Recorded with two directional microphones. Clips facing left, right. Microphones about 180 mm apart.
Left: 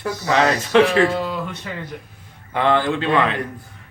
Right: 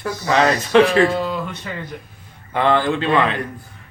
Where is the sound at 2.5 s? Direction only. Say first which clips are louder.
Right 1 dB; 35° right (ahead or behind).